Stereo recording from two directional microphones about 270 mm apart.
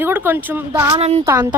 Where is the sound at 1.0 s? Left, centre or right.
Right.